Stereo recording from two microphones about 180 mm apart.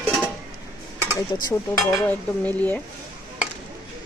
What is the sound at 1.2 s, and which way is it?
Dishes, 20° left (ahead or behind).